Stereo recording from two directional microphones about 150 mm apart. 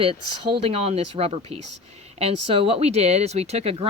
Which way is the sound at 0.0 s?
40° right (ahead or behind).